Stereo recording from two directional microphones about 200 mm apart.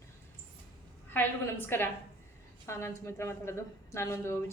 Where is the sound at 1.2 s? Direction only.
10° left (ahead or behind).